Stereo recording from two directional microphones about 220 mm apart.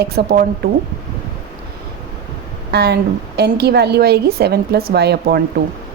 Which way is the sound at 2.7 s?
50° right (ahead or behind).